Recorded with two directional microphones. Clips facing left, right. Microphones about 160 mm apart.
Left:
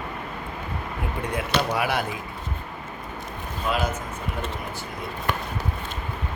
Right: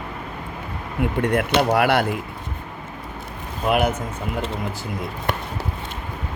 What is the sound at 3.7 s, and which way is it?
Speech, 60° right (ahead or behind).